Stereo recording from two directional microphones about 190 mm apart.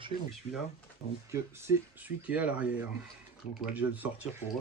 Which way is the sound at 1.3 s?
15° right (ahead or behind).